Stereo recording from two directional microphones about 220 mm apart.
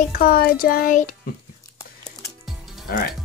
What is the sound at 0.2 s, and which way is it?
Speech, 40° left (ahead or behind).